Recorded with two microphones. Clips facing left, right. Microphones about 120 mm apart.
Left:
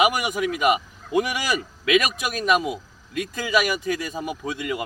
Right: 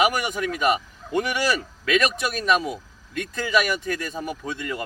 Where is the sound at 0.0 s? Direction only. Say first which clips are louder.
Left 1 dB; 10° left (ahead or behind).